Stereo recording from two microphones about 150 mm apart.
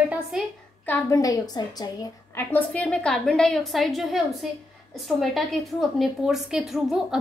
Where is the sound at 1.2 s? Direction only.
25° left (ahead or behind).